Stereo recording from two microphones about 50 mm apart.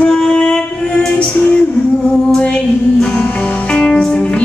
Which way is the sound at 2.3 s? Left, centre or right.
Centre.